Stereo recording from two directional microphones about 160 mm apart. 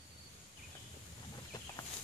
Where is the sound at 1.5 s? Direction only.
25° left (ahead or behind).